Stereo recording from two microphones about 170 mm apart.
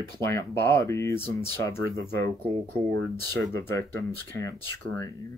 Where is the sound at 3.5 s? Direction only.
15° left (ahead or behind).